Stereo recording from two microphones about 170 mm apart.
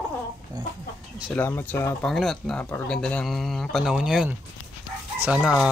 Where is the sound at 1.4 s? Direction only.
15° left (ahead or behind).